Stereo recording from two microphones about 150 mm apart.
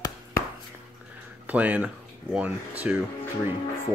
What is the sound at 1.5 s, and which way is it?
Speech, 10° right (ahead or behind).